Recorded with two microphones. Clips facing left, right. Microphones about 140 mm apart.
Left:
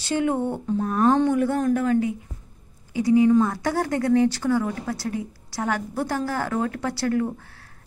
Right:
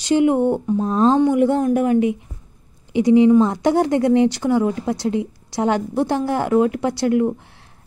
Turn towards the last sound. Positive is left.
turn(degrees=-20)  # may be behind; listen again after turning